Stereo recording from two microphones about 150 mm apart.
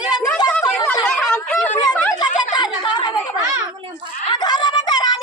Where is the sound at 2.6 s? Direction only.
30° left (ahead or behind).